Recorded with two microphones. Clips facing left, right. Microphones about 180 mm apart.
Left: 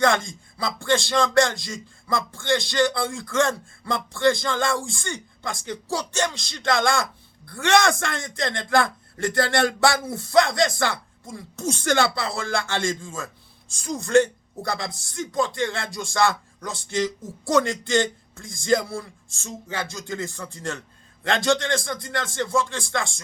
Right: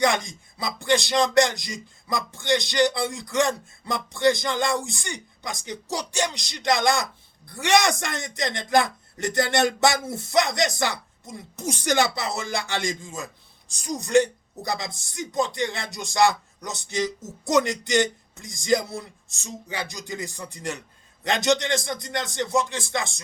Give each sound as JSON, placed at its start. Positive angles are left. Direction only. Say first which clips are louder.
{"t": 0.0, "sound": "speech", "louder": "left 2 dB", "side_deg": -20}